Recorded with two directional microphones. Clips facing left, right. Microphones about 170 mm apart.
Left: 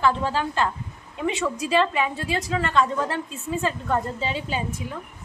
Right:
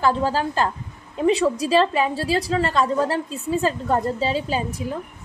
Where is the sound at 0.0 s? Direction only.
40° right (ahead or behind).